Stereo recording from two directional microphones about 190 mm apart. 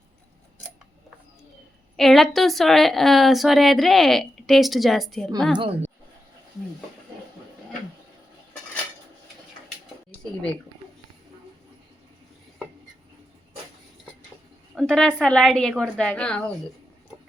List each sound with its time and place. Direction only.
2.0 s a woman's voice: centre (ahead or behind)
5.5 s a woman's voice: 30° right (ahead or behind)
14.8 s a woman's voice: centre (ahead or behind)